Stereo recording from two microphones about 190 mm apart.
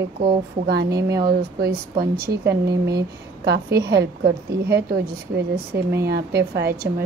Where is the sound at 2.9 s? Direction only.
60° right (ahead or behind).